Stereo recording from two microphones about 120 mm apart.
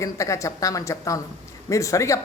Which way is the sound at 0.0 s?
25° left (ahead or behind).